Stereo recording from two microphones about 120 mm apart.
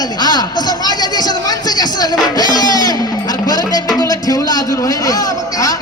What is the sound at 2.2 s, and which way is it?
Music, 35° left (ahead or behind).